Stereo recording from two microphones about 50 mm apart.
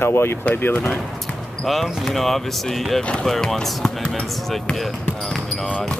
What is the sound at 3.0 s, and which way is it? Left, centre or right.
Speech, left.